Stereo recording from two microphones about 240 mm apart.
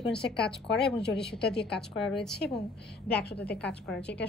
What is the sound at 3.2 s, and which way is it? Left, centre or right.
Speech, left.